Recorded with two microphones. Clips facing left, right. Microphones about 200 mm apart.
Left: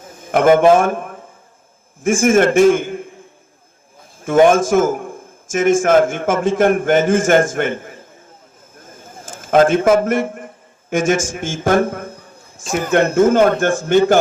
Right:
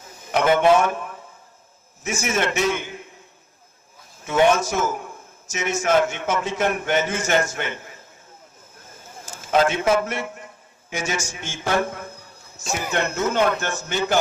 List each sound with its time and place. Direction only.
0.0 s a man's voice: 50° left (ahead or behind)
4.2 s a man's voice: 50° left (ahead or behind)
8.8 s a sound: 50° left (ahead or behind)
12.9 s a man's voice: 50° left (ahead or behind)